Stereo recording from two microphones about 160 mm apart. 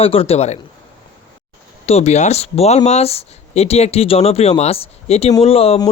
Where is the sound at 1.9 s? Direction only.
45° left (ahead or behind).